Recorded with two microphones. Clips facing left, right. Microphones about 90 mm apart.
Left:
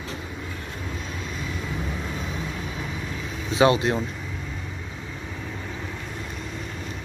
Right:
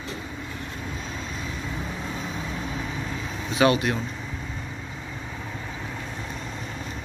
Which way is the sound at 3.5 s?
25° left (ahead or behind).